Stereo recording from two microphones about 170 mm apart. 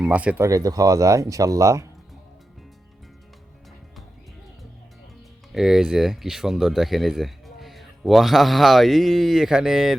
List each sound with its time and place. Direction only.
0.0 s speech: 5° right (ahead or behind)
5.5 s speech: centre (ahead or behind)